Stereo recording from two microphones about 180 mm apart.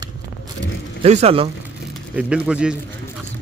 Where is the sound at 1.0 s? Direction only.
35° right (ahead or behind).